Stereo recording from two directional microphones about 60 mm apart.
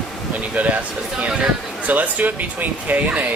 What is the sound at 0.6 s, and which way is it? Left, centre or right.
Speech, right.